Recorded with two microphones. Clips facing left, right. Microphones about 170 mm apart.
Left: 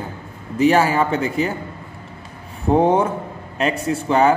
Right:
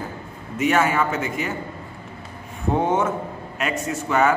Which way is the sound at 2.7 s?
35° left (ahead or behind).